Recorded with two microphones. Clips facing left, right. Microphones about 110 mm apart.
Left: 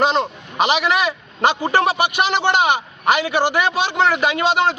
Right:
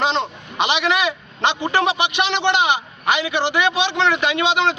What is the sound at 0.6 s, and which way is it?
A man's voice, 40° left (ahead or behind).